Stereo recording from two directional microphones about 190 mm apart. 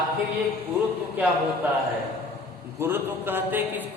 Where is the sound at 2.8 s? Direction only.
10° right (ahead or behind).